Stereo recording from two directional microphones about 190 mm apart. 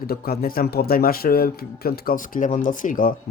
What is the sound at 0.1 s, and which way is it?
Speech, 50° left (ahead or behind).